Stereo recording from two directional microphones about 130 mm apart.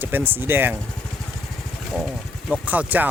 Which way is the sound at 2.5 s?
10° right (ahead or behind).